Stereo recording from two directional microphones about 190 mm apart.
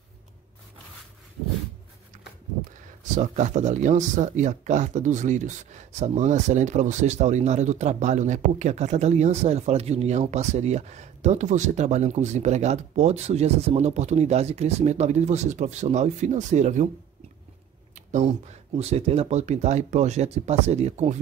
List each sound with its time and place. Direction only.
3.2 s speech: 40° right (ahead or behind)
17.9 s a sound: 35° right (ahead or behind)
18.8 s speech: 35° right (ahead or behind)